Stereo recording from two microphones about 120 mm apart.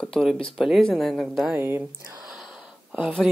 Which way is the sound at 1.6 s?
20° right (ahead or behind).